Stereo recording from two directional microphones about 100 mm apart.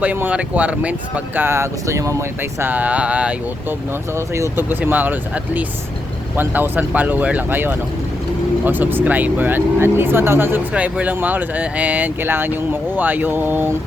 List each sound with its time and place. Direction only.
0.0 s speech: 15° right (ahead or behind)
4.1 s speech: 30° right (ahead or behind)